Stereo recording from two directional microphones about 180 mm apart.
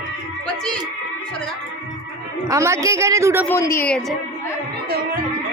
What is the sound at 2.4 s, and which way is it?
A woman's voice, 15° right (ahead or behind).